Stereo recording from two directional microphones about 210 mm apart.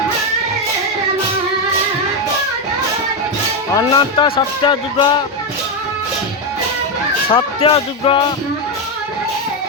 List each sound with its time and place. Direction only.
3.8 s speech: 20° left (ahead or behind)
7.3 s speech: 25° left (ahead or behind)